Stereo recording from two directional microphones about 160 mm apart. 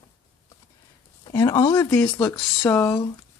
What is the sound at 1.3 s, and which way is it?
Speech, 20° left (ahead or behind).